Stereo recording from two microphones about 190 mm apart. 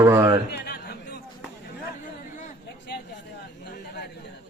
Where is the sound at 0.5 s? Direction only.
55° left (ahead or behind).